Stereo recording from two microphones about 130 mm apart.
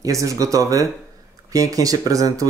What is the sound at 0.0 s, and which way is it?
Speech, 25° right (ahead or behind).